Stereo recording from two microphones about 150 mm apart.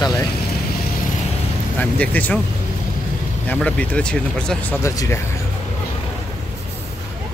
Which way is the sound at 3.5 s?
10° left (ahead or behind).